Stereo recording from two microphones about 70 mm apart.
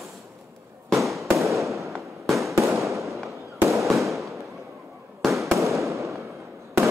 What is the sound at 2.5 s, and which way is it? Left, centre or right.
Fireworks, right.